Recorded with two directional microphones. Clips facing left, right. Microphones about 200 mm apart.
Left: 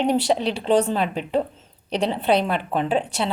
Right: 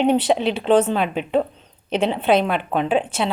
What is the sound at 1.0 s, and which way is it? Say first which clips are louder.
A woman's voice: right 2 dB; 35° left (ahead or behind).